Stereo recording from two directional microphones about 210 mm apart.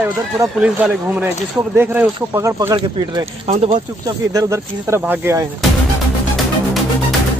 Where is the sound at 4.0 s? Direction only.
15° right (ahead or behind).